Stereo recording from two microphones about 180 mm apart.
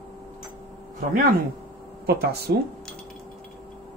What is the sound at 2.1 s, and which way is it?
Speech, 60° right (ahead or behind).